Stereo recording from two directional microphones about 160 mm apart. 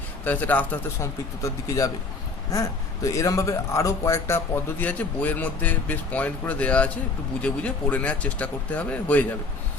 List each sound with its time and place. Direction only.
0.3 s speech: 10° left (ahead or behind)
1.4 s speech: 20° left (ahead or behind)